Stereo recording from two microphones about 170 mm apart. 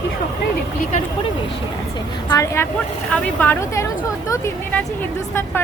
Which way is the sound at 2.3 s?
20° left (ahead or behind).